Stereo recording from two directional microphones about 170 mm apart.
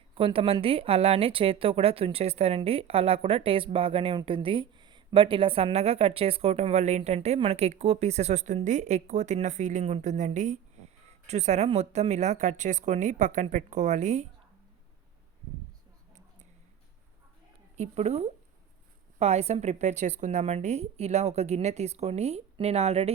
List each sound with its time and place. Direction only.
0.1 s a woman's voice: 30° right (ahead or behind)
17.7 s a woman's voice: 40° right (ahead or behind)